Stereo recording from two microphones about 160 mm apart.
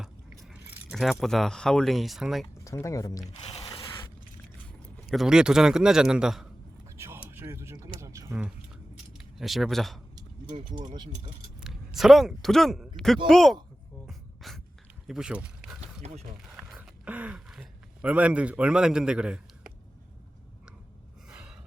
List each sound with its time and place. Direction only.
0.5 s speech: 5° right (ahead or behind)
2.6 s speech: 20° left (ahead or behind)
3.3 s a sound: 35° left (ahead or behind)
5.1 s a man's voice: 5° right (ahead or behind)
6.9 s a sound: 15° right (ahead or behind)
9.1 s speech: centre (ahead or behind)
11.6 s a man's voice: centre (ahead or behind)
14.1 s beatboxing: centre (ahead or behind)
15.0 s speech: 5° right (ahead or behind)
15.8 s a sound: 40° right (ahead or behind)
16.6 s a sound: 5° right (ahead or behind)
21.2 s gasp: 5° right (ahead or behind)